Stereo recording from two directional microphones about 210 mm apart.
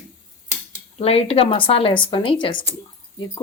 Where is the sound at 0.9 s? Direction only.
30° left (ahead or behind).